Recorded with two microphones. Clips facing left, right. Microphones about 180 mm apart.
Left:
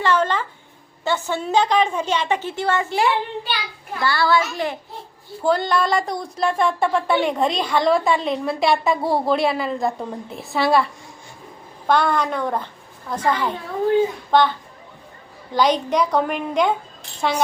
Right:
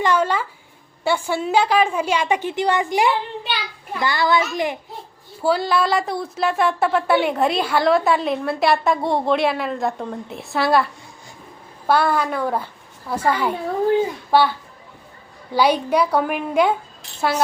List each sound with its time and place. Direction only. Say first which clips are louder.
0.0 s a sound: right 1 dB; 10° right (ahead or behind)
1.0 s a woman's voice: right 2 dB; 10° right (ahead or behind)
15.5 s a woman's voice: right 1 dB; 10° right (ahead or behind)